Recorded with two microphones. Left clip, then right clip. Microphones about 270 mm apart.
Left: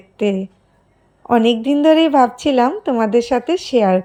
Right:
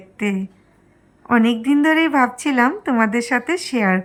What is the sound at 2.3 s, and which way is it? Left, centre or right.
Speech, right.